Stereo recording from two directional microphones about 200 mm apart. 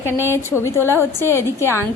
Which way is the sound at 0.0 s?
10° left (ahead or behind).